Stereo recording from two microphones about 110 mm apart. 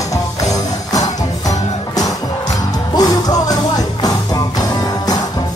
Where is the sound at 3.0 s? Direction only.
35° left (ahead or behind).